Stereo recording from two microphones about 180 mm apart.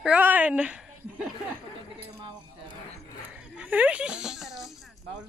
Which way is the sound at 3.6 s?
10° right (ahead or behind).